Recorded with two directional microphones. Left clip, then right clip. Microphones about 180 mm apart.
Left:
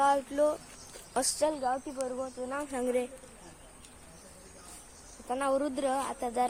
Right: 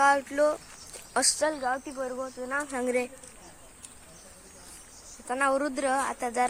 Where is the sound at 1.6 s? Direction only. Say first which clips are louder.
Right 2 dB; 30° right (ahead or behind).